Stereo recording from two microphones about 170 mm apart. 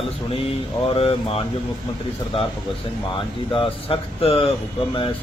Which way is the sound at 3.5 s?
30° left (ahead or behind).